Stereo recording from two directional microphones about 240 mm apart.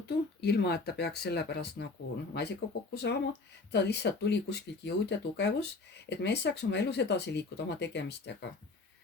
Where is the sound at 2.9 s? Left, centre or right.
Left.